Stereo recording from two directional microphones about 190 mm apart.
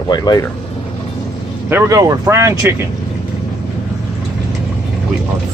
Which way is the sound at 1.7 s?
15° right (ahead or behind).